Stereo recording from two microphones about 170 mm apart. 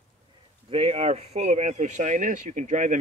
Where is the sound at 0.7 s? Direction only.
35° right (ahead or behind).